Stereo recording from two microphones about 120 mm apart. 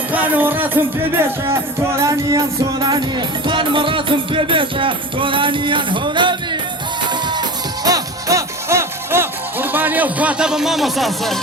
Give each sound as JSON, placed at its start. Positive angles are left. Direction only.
{"t": 0.1, "sound": "music", "side_deg": -15}
{"t": 2.0, "sound": "music", "side_deg": -25}